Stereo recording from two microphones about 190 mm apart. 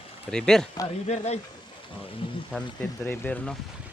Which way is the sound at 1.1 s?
35° left (ahead or behind).